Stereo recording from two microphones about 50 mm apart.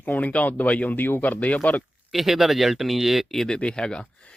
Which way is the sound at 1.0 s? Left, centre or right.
Left.